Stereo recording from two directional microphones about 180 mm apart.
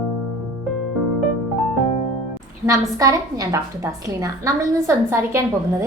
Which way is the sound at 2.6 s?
20° right (ahead or behind).